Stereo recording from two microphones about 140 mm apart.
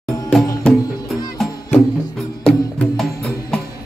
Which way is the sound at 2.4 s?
5° left (ahead or behind).